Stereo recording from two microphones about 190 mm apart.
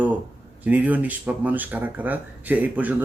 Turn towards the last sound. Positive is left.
turn(degrees=-10)  # may be behind; listen again after turning